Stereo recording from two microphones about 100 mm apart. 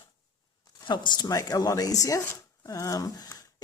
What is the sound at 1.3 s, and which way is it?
Speech, 35° left (ahead or behind).